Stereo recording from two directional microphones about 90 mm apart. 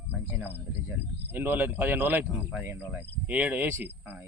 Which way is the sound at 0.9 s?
20° right (ahead or behind).